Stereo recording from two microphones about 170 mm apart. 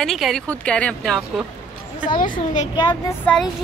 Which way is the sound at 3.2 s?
5° left (ahead or behind).